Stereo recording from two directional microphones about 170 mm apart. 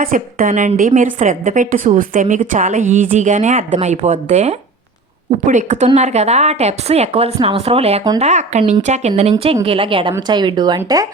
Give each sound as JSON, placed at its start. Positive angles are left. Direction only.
{"t": 0.0, "sound": "a woman's voice", "side_deg": -55}